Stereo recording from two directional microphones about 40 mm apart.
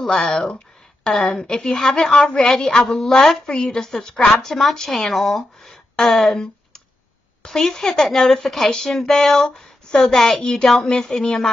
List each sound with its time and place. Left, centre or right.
0.0 s a woman's voice: centre
1.4 s a woman's voice: centre
3.0 s a woman's voice: centre
3.3 s a woman's voice: centre
8.6 s a woman's voice: centre